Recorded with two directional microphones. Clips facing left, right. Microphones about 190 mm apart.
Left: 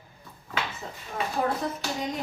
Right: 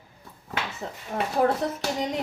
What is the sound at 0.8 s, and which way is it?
Speech, 65° right (ahead or behind).